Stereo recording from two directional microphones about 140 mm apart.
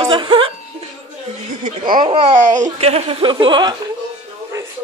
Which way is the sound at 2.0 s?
40° right (ahead or behind).